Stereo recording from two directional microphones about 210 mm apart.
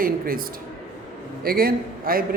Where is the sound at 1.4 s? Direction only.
45° right (ahead or behind).